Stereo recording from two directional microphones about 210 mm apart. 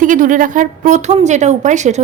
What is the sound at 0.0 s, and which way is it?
A woman's voice, 40° right (ahead or behind).